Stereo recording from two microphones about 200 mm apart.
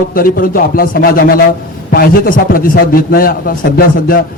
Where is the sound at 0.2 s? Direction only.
45° left (ahead or behind).